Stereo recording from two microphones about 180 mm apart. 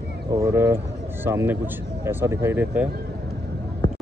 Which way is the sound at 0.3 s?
15° right (ahead or behind).